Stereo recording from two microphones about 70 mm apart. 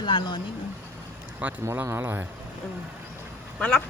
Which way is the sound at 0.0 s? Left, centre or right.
Left.